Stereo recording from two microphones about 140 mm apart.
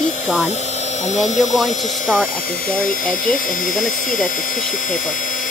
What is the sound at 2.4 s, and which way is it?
Speech, 90° left.